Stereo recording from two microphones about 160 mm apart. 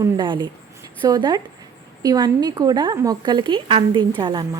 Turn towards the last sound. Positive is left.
turn(degrees=-30)  # may be behind; listen again after turning